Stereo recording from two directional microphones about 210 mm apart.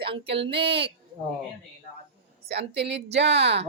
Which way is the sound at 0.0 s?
25° right (ahead or behind).